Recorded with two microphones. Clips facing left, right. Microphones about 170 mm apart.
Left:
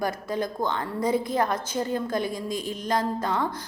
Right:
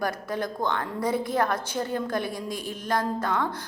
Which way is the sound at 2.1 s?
55° right (ahead or behind).